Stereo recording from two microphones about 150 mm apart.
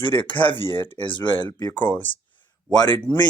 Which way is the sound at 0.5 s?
30° left (ahead or behind).